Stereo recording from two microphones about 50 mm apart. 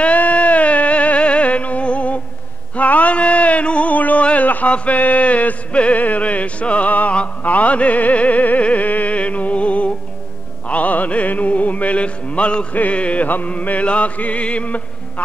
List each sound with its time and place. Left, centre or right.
0.0 s music: left
2.7 s a sound: left
4.5 s music: left